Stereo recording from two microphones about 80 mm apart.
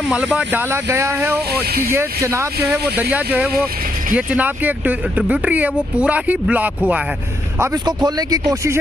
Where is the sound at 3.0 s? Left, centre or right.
Centre.